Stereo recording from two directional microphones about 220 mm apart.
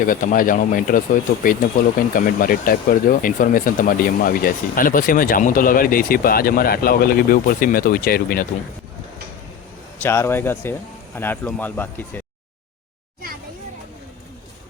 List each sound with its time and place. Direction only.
0.0 s speech: 40° left (ahead or behind)
10.0 s speech: 10° left (ahead or behind)